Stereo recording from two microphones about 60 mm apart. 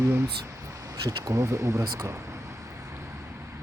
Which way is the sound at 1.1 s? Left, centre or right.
Right.